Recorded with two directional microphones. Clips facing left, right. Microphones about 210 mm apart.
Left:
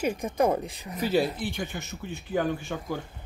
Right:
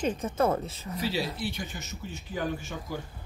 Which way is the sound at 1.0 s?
50° left (ahead or behind).